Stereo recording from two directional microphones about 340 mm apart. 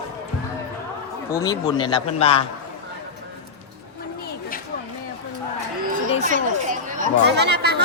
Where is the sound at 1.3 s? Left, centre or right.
Centre.